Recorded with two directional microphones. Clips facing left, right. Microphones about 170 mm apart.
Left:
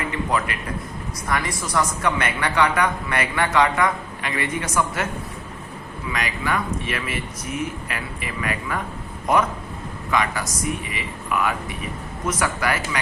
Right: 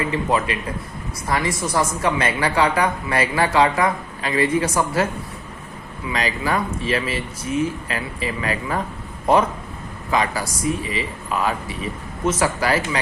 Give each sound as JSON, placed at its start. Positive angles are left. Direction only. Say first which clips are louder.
{"t": 0.0, "sound": "a woman's voice", "louder": "right 3 dB", "side_deg": -25}
{"t": 6.1, "sound": "a woman's voice", "louder": "right 3 dB", "side_deg": -30}